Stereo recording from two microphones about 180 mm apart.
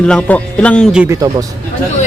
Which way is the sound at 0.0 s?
5° left (ahead or behind).